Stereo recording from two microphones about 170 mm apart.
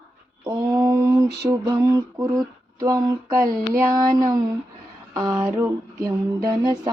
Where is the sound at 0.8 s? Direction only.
10° right (ahead or behind).